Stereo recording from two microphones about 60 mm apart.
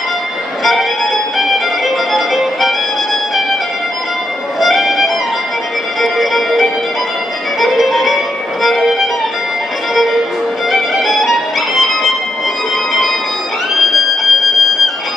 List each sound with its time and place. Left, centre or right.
0.7 s music: centre
4.6 s music: centre
10.7 s music: centre
13.9 s music: centre